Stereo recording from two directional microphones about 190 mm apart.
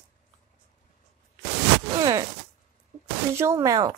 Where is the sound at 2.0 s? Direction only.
20° right (ahead or behind).